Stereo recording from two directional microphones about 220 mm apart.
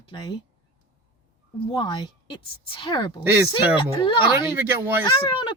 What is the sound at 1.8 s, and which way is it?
A woman's voice, 20° left (ahead or behind).